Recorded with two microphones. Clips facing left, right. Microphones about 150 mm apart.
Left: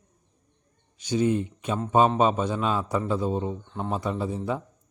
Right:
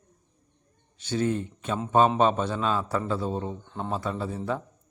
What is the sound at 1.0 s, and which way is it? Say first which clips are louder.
A man's voice: left 3 dB; 15° left (ahead or behind).